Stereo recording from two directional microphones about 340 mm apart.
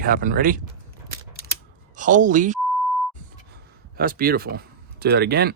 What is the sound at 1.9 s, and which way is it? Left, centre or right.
Speech, right.